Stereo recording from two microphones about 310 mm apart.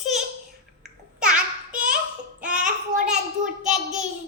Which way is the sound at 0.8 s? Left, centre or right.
Centre.